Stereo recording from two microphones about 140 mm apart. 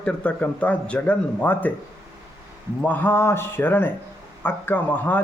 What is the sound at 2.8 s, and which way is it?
Speech, 10° left (ahead or behind).